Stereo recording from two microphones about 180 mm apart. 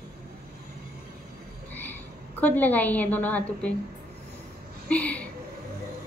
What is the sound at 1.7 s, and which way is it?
Frog, 10° left (ahead or behind).